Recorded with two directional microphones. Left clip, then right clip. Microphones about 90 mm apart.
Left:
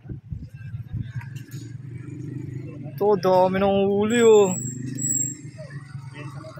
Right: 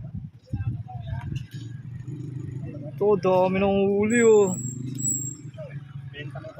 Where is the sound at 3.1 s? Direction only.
15° right (ahead or behind).